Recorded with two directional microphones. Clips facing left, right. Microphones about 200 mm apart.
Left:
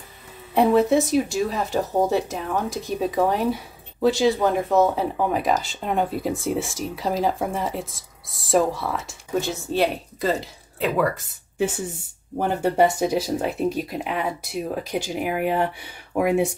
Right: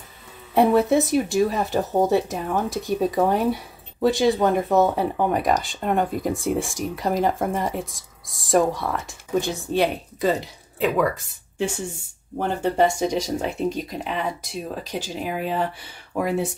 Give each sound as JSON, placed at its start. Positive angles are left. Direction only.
{"t": 0.6, "sound": "speech", "side_deg": 0}